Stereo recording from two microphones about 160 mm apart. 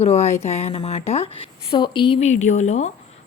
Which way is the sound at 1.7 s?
30° left (ahead or behind).